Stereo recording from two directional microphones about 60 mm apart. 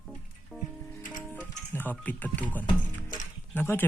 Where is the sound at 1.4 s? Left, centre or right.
Left.